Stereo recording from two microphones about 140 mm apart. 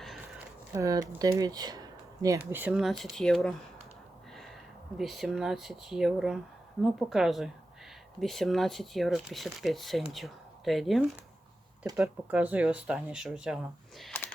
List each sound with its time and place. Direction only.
0.7 s speech: 25° right (ahead or behind)
2.5 s speech: 10° right (ahead or behind); by 3.5 s 5° left (ahead or behind)
4.9 s speech: centre (ahead or behind)
12.0 s speech: 10° right (ahead or behind)